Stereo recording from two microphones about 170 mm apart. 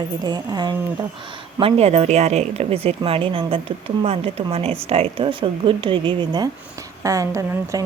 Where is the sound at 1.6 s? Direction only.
35° right (ahead or behind).